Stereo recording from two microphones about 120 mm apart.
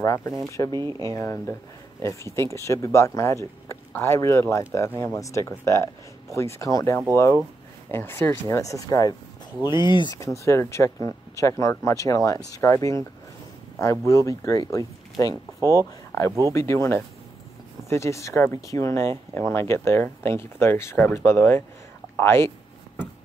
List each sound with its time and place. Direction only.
0.0 s speech: 25° left (ahead or behind)
0.7 s speech: 35° right (ahead or behind)
1.0 s speech: 25° left (ahead or behind)
10.1 s speech: 25° left (ahead or behind)